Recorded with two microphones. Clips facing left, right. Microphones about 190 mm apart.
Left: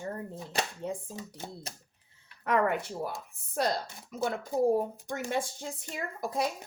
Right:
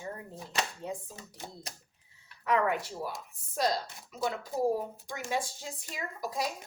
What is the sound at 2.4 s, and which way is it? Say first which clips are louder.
Speech: left 1 dB; 55° left (ahead or behind).